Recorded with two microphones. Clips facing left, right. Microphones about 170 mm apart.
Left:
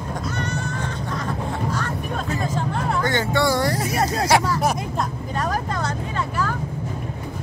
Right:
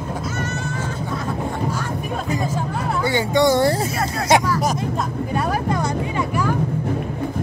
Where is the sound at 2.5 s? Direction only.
10° right (ahead or behind).